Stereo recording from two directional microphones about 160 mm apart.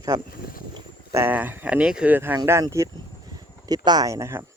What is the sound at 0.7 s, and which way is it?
Speech, 15° right (ahead or behind).